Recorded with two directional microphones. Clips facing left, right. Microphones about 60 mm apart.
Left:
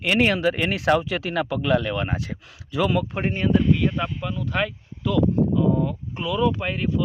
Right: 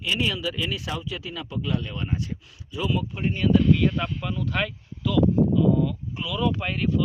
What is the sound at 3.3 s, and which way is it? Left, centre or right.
Speech, left.